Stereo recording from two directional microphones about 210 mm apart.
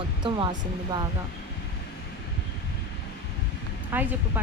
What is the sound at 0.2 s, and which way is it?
Speech, 20° right (ahead or behind).